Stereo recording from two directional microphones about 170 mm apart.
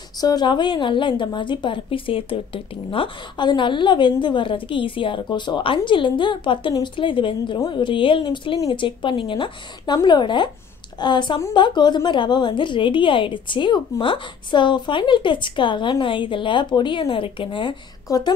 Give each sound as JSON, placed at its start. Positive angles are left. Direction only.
{"t": 0.2, "sound": "a woman's voice", "side_deg": 25}